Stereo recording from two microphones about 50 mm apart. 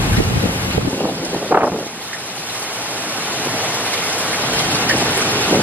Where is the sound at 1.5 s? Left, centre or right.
Right.